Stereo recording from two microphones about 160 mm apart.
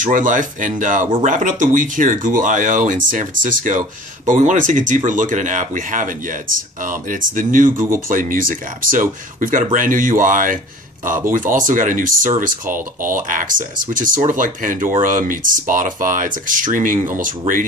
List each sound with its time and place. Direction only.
0.0 s speech: 55° right (ahead or behind)